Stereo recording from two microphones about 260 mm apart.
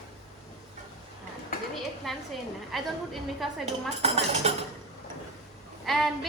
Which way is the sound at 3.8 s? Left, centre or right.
Right.